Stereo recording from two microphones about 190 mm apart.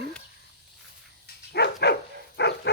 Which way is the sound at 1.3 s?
60° left (ahead or behind).